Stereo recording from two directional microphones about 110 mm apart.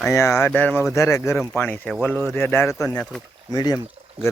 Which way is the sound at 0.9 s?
30° left (ahead or behind).